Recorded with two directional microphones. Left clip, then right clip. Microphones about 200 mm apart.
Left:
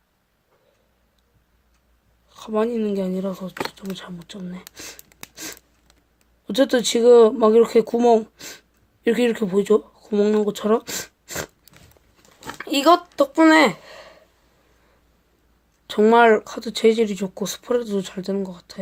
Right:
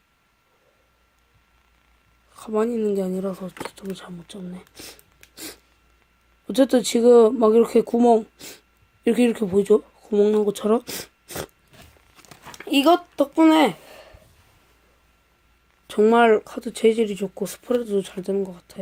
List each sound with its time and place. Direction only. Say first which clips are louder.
2.3 s speech: left 1 dB; 25° right (ahead or behind)
4.7 s a sound: left 3 dB; 15° right (ahead or behind)
6.5 s speech: even; 20° right (ahead or behind)
12.5 s speech: left 2 dB; 15° right (ahead or behind)
15.9 s speech: left 2 dB; 15° right (ahead or behind)